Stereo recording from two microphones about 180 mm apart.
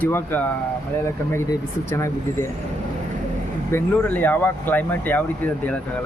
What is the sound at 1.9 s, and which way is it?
Speech, 15° left (ahead or behind).